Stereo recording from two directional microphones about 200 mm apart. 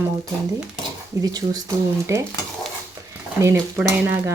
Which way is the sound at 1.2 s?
20° right (ahead or behind).